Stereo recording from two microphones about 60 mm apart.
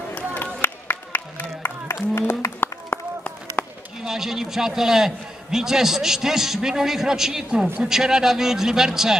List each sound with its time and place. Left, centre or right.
0.1 s run: left
0.6 s music: left
2.1 s a sound: left
4.0 s a man's voice: centre